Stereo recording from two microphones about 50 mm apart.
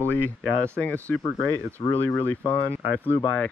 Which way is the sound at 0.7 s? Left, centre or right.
Left.